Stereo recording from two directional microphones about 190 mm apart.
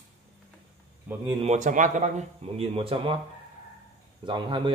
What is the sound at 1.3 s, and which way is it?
Speech, 35° right (ahead or behind).